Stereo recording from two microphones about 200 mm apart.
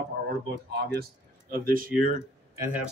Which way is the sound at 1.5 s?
45° right (ahead or behind).